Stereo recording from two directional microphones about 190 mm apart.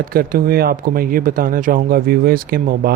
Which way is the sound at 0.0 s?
50° right (ahead or behind).